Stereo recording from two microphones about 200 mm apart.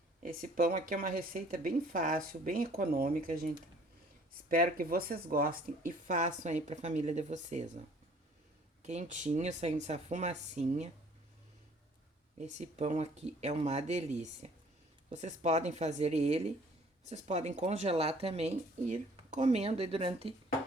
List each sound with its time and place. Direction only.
0.2 s speech: 45° right (ahead or behind)
8.8 s speech: 35° right (ahead or behind)
12.4 s speech: 35° right (ahead or behind)